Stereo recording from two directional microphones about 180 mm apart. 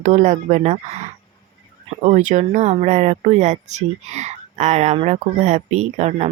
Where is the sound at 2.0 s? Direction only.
40° right (ahead or behind).